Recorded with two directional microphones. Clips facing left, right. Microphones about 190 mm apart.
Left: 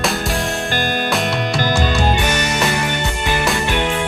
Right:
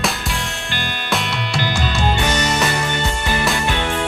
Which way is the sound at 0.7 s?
45° left (ahead or behind).